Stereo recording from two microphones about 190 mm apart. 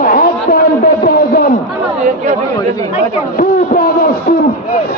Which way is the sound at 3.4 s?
50° left (ahead or behind).